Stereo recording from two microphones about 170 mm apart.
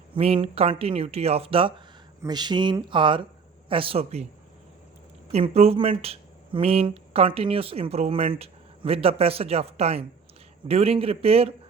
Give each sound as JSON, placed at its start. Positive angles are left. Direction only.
{"t": 0.1, "sound": "speech", "side_deg": -35}
{"t": 5.3, "sound": "speech", "side_deg": -35}